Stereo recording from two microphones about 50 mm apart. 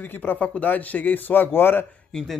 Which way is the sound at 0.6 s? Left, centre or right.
Left.